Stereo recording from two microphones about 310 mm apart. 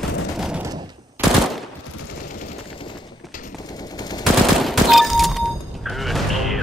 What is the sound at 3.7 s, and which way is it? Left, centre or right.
Machine gun, centre.